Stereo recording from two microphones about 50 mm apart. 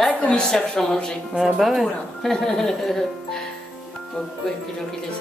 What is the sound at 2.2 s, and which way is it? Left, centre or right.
Speech, centre.